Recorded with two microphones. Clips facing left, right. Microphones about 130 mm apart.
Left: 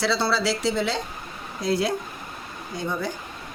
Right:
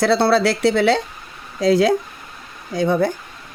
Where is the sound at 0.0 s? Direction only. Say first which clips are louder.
Right 8 dB; 55° right (ahead or behind).